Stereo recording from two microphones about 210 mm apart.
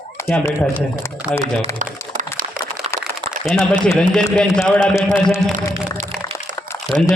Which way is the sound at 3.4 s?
5° left (ahead or behind).